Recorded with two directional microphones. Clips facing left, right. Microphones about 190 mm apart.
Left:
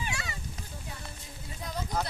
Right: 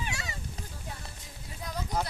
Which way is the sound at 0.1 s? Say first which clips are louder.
Left 1 dB; 40° right (ahead or behind).